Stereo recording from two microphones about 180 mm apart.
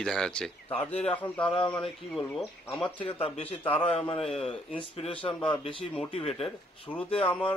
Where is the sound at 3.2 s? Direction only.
35° left (ahead or behind).